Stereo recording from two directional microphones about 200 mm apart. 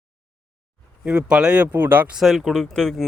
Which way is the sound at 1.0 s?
5° right (ahead or behind).